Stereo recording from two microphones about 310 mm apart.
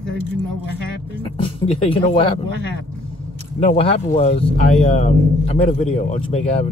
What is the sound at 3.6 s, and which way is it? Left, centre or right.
Speech, centre.